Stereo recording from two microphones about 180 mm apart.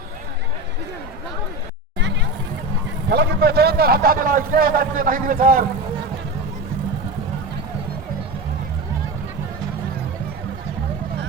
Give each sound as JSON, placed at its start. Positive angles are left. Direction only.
{"t": 3.1, "sound": "a man's voice", "side_deg": -65}